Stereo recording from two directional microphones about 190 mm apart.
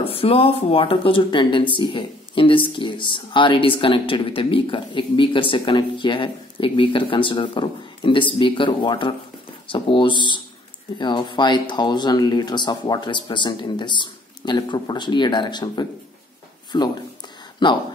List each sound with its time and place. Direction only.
0.0 s speech: 30° left (ahead or behind)